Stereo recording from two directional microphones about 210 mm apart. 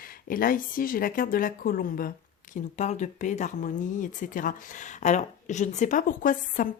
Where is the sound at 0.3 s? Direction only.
40° left (ahead or behind).